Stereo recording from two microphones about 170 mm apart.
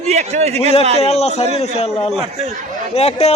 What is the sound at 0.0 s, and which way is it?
Speech, 40° right (ahead or behind).